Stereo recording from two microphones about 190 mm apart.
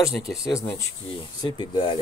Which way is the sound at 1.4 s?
25° left (ahead or behind).